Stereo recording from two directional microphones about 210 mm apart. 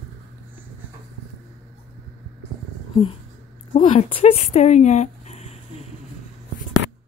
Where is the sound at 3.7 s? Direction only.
30° left (ahead or behind).